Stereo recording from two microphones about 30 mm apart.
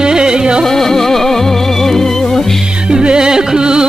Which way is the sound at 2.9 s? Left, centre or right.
Right.